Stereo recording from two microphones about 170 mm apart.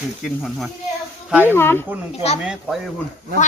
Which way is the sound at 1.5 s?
15° left (ahead or behind).